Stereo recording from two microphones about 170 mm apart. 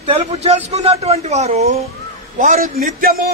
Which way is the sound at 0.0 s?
35° right (ahead or behind).